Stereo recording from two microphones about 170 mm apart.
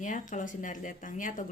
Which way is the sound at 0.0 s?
50° left (ahead or behind).